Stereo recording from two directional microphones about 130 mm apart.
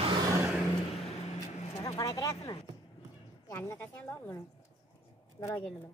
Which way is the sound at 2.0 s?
25° left (ahead or behind).